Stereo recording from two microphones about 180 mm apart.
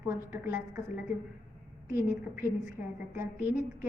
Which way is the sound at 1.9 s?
15° right (ahead or behind).